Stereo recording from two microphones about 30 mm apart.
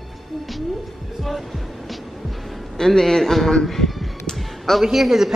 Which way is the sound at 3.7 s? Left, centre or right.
Centre.